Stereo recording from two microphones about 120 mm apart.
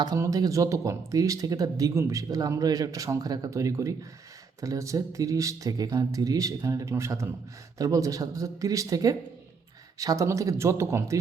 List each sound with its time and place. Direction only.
0.2 s speech: 30° right (ahead or behind)